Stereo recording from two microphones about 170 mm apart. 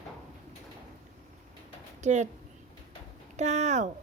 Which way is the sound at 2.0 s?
45° right (ahead or behind).